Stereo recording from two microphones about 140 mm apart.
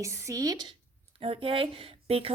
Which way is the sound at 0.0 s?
20° right (ahead or behind).